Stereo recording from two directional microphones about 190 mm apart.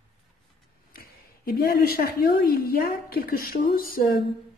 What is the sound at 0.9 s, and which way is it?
A woman's voice, 55° left (ahead or behind).